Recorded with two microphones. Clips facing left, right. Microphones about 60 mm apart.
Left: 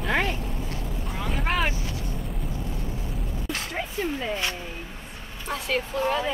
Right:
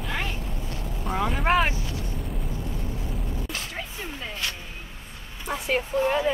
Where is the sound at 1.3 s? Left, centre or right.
Centre.